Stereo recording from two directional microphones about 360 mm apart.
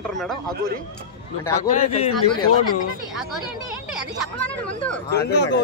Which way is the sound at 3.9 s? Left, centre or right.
Centre.